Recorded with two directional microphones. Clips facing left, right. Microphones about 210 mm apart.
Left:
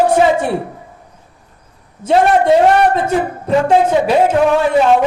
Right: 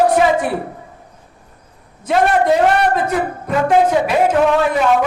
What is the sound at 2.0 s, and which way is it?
Music, 30° left (ahead or behind).